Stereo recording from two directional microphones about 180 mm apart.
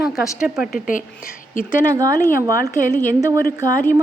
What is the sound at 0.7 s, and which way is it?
Speech, 50° left (ahead or behind).